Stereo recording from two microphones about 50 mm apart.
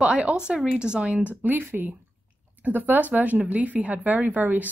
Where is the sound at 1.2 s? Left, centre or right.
Right.